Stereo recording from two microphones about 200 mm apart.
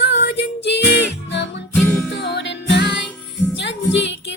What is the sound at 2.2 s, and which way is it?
Music, 60° left (ahead or behind).